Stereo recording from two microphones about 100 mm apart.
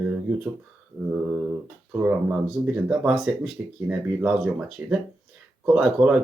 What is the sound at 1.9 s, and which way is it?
Speech, 20° right (ahead or behind).